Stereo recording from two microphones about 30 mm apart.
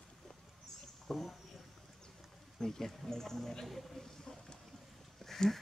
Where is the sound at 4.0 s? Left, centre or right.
Centre.